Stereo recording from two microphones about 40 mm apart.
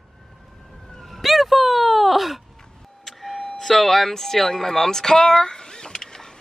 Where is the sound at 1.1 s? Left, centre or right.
Centre.